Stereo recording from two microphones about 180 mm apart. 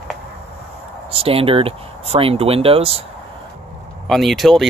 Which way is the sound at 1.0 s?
30° right (ahead or behind).